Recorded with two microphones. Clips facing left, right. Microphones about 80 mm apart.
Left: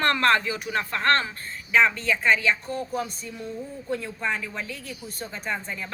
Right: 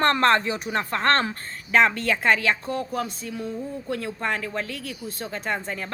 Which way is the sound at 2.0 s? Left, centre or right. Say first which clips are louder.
Right 1 dB; right.